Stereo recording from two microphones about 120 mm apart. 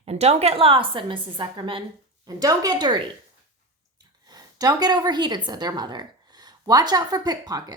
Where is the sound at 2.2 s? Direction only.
30° right (ahead or behind).